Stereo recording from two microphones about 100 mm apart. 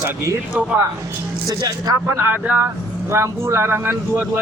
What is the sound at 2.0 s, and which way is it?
Speech, 25° right (ahead or behind).